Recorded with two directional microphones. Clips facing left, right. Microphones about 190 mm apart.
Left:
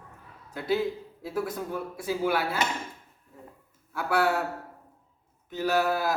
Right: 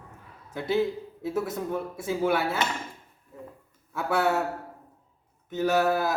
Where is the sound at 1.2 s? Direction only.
20° right (ahead or behind).